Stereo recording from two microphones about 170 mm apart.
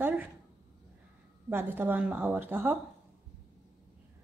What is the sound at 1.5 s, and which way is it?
Speech, 10° right (ahead or behind).